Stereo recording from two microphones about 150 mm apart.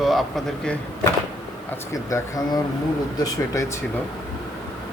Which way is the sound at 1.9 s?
20° left (ahead or behind).